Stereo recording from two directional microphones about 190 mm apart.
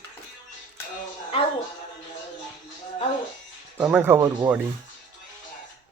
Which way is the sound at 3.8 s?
10° right (ahead or behind).